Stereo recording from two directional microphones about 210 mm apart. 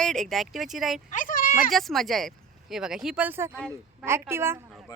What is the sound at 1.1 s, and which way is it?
Speech, 40° left (ahead or behind).